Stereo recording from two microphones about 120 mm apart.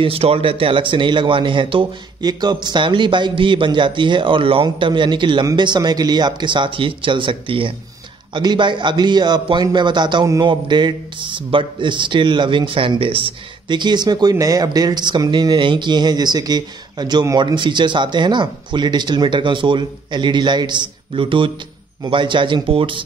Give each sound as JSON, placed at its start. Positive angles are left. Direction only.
{"t": 0.0, "sound": "speech", "side_deg": -55}